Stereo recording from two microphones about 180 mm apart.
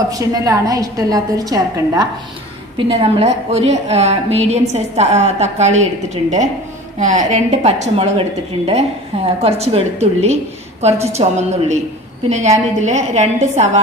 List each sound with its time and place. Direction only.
0.1 s a woman's voice: 20° right (ahead or behind)
2.9 s a woman's voice: 35° right (ahead or behind)